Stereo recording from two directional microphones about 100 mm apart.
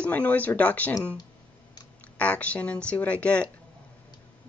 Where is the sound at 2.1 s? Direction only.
15° left (ahead or behind).